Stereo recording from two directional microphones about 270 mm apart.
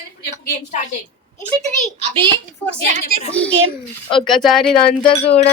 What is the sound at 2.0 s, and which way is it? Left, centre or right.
Speech, centre.